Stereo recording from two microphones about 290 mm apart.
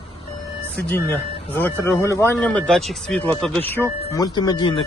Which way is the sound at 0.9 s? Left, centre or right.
Centre.